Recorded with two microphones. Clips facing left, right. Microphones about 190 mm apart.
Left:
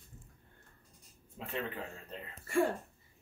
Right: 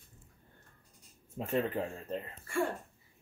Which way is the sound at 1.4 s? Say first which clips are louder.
Right 6 dB; 45° right (ahead or behind).